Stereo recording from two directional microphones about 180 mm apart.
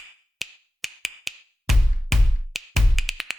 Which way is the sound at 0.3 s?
Centre (ahead or behind).